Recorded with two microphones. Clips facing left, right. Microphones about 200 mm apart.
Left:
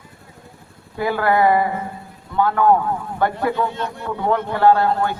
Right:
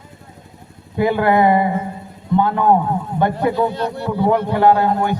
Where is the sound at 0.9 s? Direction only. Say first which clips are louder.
Right 3 dB; 20° right (ahead or behind).